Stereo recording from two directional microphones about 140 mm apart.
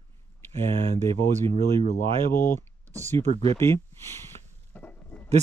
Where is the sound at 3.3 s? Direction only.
45° right (ahead or behind).